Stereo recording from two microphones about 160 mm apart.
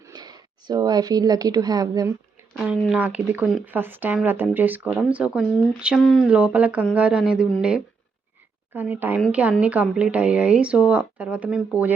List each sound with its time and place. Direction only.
0.0 s speech: 25° right (ahead or behind)
2.9 s speech: 10° right (ahead or behind)
6.2 s speech: 5° right (ahead or behind)